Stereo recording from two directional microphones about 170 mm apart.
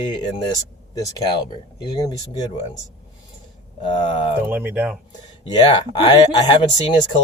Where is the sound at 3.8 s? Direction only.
30° left (ahead or behind).